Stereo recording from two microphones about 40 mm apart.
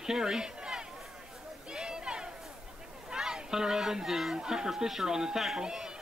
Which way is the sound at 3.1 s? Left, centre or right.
Centre.